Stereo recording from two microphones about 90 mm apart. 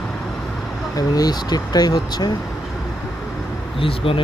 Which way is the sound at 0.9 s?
45° left (ahead or behind).